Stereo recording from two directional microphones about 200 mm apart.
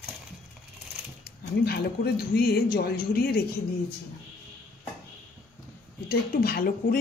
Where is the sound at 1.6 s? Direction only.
50° left (ahead or behind).